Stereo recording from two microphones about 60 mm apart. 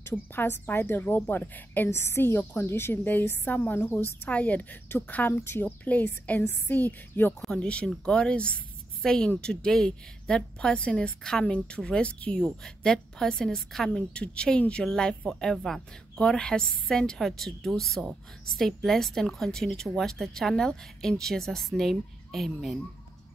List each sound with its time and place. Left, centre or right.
0.1 s a woman's voice: left
1.9 s a woman's voice: left
7.4 s a woman's voice: centre
12.4 s a woman's voice: centre